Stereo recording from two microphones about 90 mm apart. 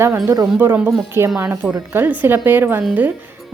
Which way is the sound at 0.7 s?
20° right (ahead or behind).